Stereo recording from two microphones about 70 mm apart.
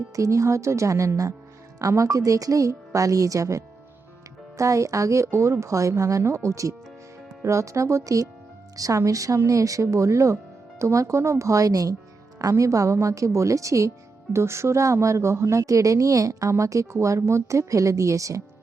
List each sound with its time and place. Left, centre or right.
0.2 s a woman's voice: right